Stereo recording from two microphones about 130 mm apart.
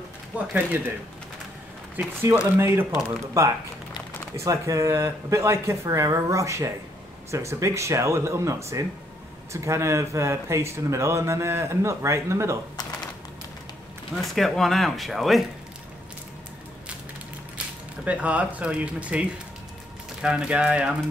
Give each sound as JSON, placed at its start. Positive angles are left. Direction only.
{"t": 0.3, "sound": "speech", "side_deg": -10}
{"t": 2.0, "sound": "speech", "side_deg": -15}
{"t": 14.2, "sound": "speech", "side_deg": 0}
{"t": 18.0, "sound": "speech", "side_deg": -10}